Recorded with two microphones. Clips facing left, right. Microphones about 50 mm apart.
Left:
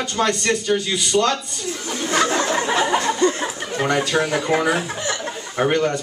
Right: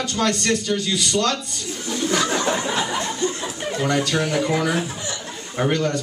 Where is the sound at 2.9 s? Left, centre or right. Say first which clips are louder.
Left 6 dB; left.